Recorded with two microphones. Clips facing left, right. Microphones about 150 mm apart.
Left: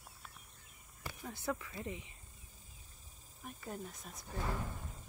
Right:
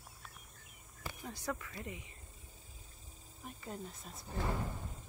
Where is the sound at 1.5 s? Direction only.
15° left (ahead or behind).